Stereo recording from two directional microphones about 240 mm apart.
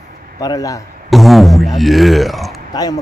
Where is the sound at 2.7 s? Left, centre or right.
Centre.